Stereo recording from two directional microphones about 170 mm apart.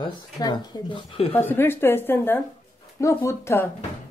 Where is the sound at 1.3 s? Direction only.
10° left (ahead or behind).